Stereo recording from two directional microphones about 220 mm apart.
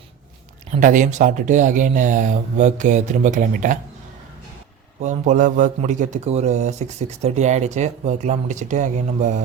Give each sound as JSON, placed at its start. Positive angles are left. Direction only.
{"t": 0.7, "sound": "speech", "side_deg": -35}
{"t": 5.0, "sound": "speech", "side_deg": -35}